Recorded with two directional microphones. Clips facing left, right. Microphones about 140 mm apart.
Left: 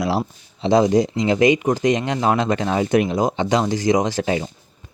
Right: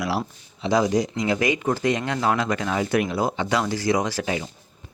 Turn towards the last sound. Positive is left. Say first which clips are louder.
# left 5 dB
turn(degrees=30)  # may be behind; listen again after turning